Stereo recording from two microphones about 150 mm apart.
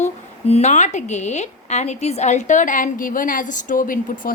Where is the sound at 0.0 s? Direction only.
45° left (ahead or behind).